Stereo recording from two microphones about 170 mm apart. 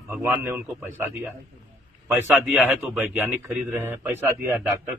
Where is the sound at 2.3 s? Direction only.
Centre (ahead or behind).